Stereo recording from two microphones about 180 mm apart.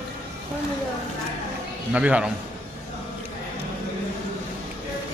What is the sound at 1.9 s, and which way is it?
Speech, 5° right (ahead or behind).